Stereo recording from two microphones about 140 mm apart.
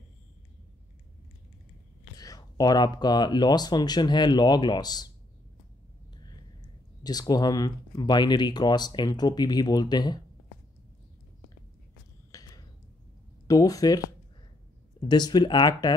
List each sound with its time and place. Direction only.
2.1 s speech: 25° left (ahead or behind)
7.0 s speech: 30° left (ahead or behind)
12.3 s a sound: 25° left (ahead or behind)
13.5 s speech: 25° left (ahead or behind)